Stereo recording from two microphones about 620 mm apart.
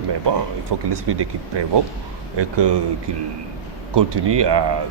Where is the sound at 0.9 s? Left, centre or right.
Right.